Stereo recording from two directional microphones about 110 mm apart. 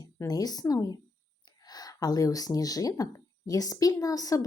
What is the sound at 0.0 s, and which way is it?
Speech, 35° left (ahead or behind).